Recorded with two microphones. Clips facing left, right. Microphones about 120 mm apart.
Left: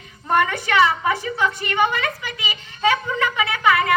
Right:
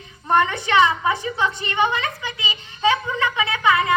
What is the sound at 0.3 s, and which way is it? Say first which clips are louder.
A woman's voice: right 1 dB; 20° right (ahead or behind).